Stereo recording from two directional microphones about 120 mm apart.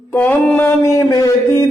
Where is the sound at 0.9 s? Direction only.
30° left (ahead or behind).